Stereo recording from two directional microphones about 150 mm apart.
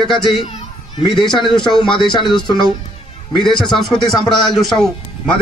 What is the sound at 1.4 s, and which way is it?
Speech, 5° left (ahead or behind).